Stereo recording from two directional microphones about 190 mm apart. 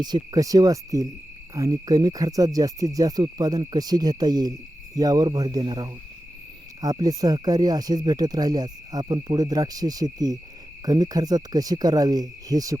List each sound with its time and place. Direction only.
0.0 s cricket: 20° right (ahead or behind)